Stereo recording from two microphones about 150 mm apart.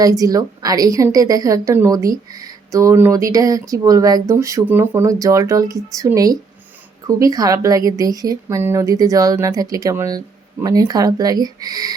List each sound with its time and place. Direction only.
0.0 s a woman's voice: 25° right (ahead or behind)